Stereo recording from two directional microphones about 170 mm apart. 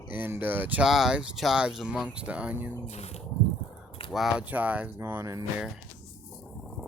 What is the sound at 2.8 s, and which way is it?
Speech, 40° left (ahead or behind).